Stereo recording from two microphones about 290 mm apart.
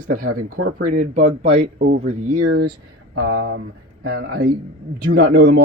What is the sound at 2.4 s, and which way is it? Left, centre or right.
Speech, right.